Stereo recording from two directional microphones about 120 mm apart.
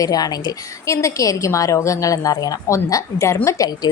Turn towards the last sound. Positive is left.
turn(degrees=30)  # may be behind; listen again after turning